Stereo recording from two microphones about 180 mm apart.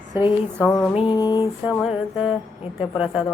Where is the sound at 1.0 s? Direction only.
25° left (ahead or behind).